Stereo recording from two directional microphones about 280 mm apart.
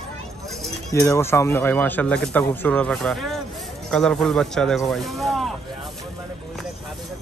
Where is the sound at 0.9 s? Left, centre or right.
Centre.